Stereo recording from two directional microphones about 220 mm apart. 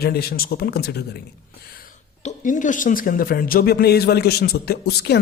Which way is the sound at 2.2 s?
35° left (ahead or behind).